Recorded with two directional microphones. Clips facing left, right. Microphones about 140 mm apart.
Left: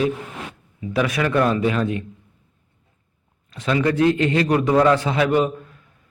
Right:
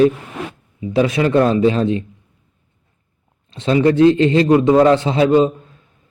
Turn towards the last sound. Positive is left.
turn(degrees=-25)  # may be behind; listen again after turning